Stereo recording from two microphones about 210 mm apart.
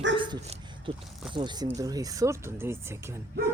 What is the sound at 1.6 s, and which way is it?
Speech, 15° right (ahead or behind).